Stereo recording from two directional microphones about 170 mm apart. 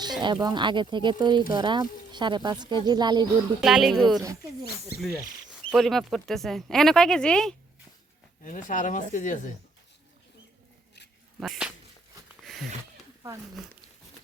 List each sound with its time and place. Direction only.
0.2 s speech: 25° right (ahead or behind)
3.6 s speech: centre (ahead or behind)
5.7 s speech: centre (ahead or behind)
8.4 s speech: 50° left (ahead or behind)
11.3 s speech: 5° right (ahead or behind)
12.4 s a sound: centre (ahead or behind)